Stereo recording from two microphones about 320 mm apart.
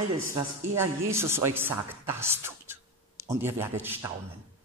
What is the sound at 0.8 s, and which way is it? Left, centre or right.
A man's voice, centre.